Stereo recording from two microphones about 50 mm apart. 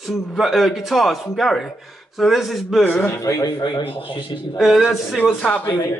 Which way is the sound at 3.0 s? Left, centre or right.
Left.